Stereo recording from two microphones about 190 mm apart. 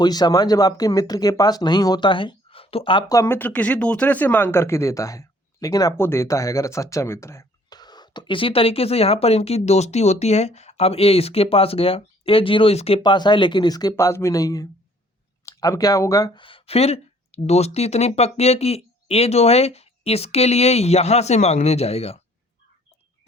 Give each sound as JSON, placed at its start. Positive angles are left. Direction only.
{"t": 0.0, "sound": "speech", "side_deg": 20}
{"t": 3.2, "sound": "speech", "side_deg": 10}